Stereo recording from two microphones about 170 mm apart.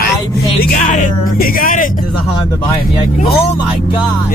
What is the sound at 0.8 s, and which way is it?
Speech, 50° left (ahead or behind).